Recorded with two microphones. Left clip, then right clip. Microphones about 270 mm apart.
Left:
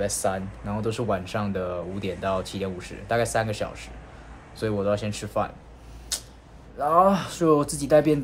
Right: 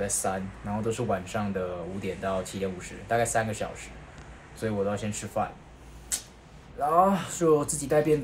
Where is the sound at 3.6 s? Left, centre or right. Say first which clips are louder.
Left 3 dB; centre.